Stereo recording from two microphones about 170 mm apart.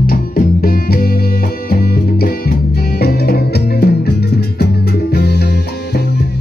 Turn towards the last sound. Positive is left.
turn(degrees=70)  # may be behind; listen again after turning